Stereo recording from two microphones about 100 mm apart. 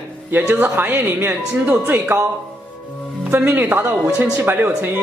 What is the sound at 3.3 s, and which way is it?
Speech, 20° right (ahead or behind).